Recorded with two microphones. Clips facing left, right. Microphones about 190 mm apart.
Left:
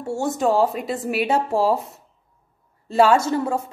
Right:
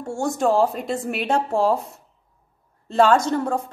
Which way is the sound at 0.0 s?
5° left (ahead or behind).